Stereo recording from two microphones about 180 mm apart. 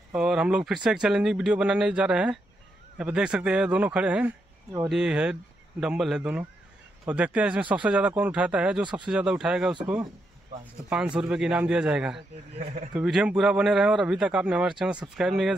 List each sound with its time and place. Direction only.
0.1 s a man's voice: 5° right (ahead or behind)
10.9 s speech: 5° right (ahead or behind)
12.5 s speech: 45° right (ahead or behind)
12.9 s speech: 5° right (ahead or behind)